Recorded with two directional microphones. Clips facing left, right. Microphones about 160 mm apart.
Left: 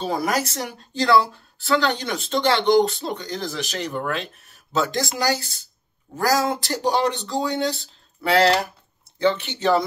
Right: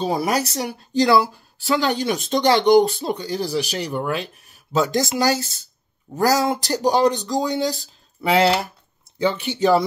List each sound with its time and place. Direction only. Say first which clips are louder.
0.0 s speech: right 2 dB; 15° right (ahead or behind)